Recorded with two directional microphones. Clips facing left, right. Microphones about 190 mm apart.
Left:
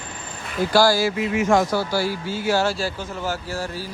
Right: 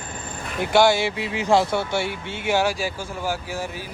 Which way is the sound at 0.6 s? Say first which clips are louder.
Even; 20° right (ahead or behind).